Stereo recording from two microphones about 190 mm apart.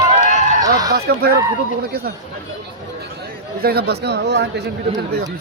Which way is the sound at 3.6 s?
55° right (ahead or behind).